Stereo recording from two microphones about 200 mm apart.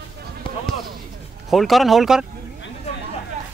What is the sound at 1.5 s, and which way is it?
Speech, centre (ahead or behind).